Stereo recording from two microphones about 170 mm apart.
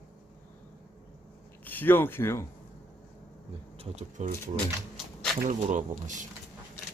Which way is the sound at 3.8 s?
45° right (ahead or behind).